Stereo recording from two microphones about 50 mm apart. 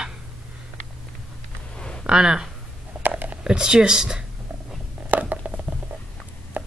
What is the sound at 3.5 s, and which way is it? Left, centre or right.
Speech, centre.